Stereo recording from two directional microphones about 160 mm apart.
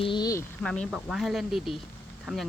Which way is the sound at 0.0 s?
30° left (ahead or behind).